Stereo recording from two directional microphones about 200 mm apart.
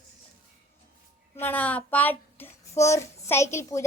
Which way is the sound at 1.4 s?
10° left (ahead or behind).